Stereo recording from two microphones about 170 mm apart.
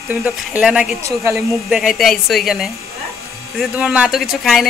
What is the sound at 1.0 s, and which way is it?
Speech, 20° right (ahead or behind).